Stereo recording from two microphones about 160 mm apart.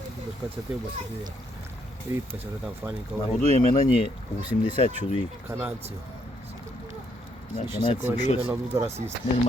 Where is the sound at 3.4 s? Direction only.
40° right (ahead or behind).